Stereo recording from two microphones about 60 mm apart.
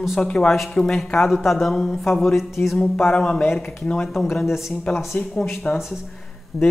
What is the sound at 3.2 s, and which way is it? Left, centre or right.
Speech, centre.